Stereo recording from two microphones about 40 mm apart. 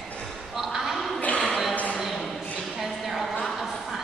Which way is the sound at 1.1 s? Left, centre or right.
Left.